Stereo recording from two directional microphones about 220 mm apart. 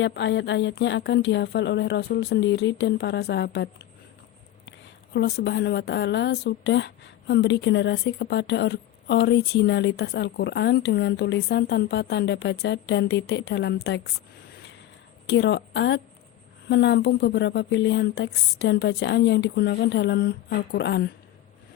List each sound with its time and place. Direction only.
0.0 s speech: 55° left (ahead or behind)
5.1 s speech: 50° left (ahead or behind)
15.3 s speech: 50° left (ahead or behind)